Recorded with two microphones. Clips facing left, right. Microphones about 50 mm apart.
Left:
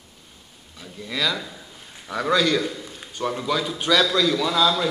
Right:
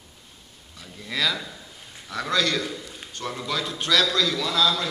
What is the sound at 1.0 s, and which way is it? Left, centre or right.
A man's voice, centre.